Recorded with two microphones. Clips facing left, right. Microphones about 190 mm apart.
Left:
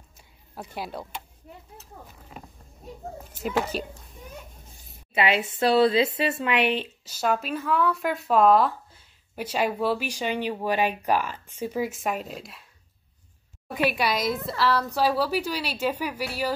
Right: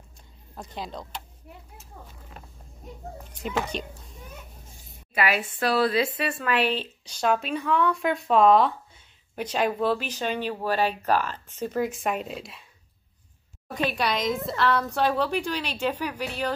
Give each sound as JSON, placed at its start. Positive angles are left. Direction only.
{"t": 0.6, "sound": "a woman's voice", "side_deg": 10}
{"t": 3.3, "sound": "speech", "side_deg": 5}
{"t": 5.1, "sound": "a woman's voice", "side_deg": 25}
{"t": 13.7, "sound": "a woman's voice", "side_deg": 10}